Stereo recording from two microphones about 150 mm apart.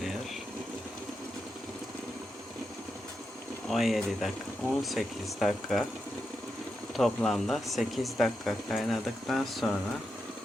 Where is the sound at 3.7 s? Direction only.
Centre (ahead or behind).